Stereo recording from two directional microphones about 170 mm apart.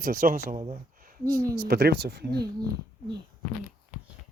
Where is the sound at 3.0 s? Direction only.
55° left (ahead or behind).